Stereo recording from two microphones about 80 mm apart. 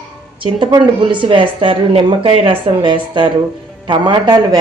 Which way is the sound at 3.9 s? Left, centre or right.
Right.